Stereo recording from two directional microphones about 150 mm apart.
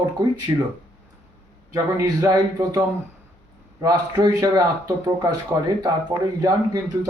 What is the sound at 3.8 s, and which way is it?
Speech, 25° right (ahead or behind).